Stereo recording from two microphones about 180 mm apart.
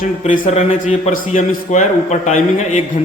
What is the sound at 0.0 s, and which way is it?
A man's voice, 50° left (ahead or behind).